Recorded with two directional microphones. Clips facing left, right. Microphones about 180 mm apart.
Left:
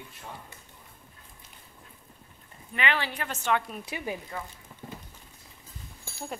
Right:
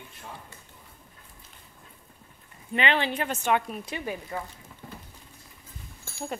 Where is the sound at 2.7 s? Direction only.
25° right (ahead or behind).